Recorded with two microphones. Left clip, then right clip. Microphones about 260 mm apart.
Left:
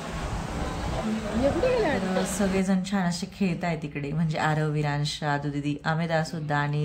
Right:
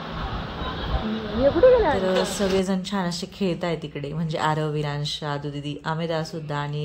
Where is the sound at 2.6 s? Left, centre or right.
Centre.